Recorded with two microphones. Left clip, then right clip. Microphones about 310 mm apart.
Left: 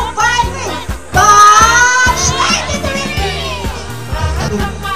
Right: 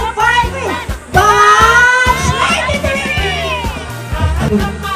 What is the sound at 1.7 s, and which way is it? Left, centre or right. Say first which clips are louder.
Music: even; centre.